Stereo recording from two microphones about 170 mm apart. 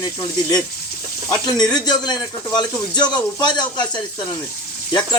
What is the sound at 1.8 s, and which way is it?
A man's voice, 25° left (ahead or behind).